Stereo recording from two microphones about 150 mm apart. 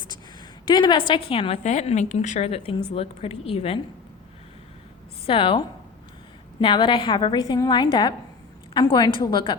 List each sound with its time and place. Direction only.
0.7 s a woman's voice: 30° left (ahead or behind)
5.2 s a woman's voice: 35° left (ahead or behind)